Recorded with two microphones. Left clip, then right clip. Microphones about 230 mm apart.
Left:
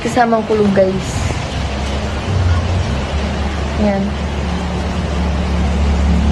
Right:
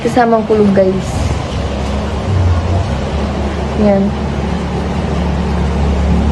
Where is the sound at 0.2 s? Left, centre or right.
Centre.